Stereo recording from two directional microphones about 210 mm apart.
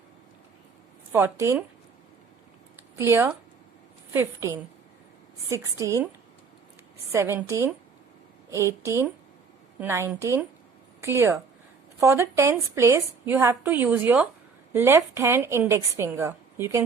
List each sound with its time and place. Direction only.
1.1 s a woman's voice: 15° right (ahead or behind)
2.9 s a woman's voice: 15° right (ahead or behind)
5.7 s a woman's voice: 15° right (ahead or behind)
7.1 s a woman's voice: 10° right (ahead or behind)
9.8 s a woman's voice: 10° right (ahead or behind)